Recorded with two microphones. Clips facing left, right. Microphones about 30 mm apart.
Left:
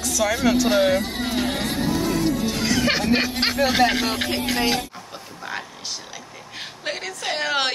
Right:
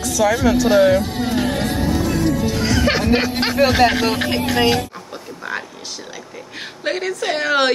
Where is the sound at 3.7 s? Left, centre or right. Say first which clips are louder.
Right 3 dB; centre.